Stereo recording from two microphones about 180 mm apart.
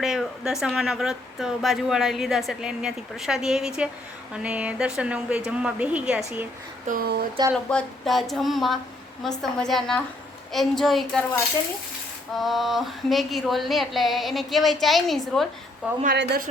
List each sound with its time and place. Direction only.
0.0 s a woman's voice: centre (ahead or behind)
6.8 s speech: 50° right (ahead or behind)
7.5 s a woman's voice: 5° left (ahead or behind)
12.4 s a woman's voice: centre (ahead or behind)